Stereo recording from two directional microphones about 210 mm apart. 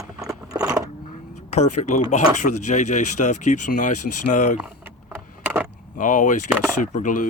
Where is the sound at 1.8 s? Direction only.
35° left (ahead or behind).